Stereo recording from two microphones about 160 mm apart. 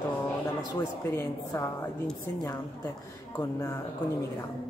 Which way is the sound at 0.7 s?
15° left (ahead or behind).